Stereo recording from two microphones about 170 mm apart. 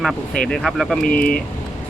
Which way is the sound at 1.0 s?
55° left (ahead or behind).